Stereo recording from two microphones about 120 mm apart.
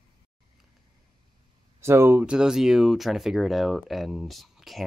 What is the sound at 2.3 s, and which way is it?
Speech, 5° right (ahead or behind).